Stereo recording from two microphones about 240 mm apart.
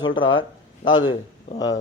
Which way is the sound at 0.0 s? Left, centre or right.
Centre.